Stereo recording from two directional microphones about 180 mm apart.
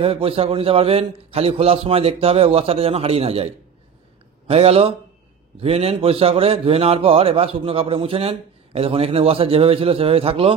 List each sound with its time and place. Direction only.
0.0 s a man's voice: 30° right (ahead or behind)